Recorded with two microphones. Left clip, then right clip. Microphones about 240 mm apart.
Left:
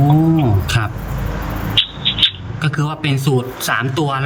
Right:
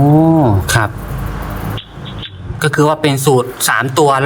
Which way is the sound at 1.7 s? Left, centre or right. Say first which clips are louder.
Left 12 dB; centre.